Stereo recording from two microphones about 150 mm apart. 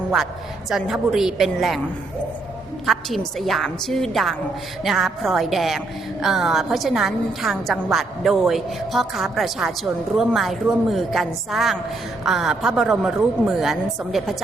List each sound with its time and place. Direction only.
0.7 s a woman's voice: centre (ahead or behind)
2.8 s a woman's voice: centre (ahead or behind)